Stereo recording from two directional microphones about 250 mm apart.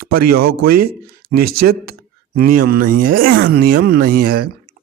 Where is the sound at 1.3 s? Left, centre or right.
Right.